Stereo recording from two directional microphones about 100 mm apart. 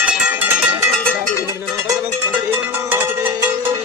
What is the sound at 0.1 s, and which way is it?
Music, 15° right (ahead or behind).